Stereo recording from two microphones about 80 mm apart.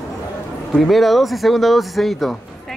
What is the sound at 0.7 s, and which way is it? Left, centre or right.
Speech, centre.